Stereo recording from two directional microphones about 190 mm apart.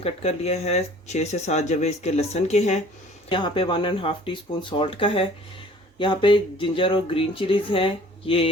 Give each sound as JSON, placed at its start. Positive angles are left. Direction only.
{"t": 0.0, "sound": "speech", "side_deg": 35}
{"t": 3.2, "sound": "speech", "side_deg": 25}